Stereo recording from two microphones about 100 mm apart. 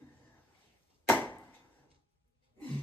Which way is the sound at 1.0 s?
15° left (ahead or behind).